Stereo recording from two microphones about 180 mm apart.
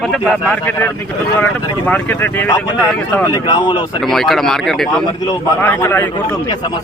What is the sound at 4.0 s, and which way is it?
Speech, centre (ahead or behind).